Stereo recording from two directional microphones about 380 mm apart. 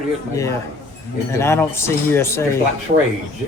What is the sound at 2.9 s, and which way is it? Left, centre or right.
Speech, centre.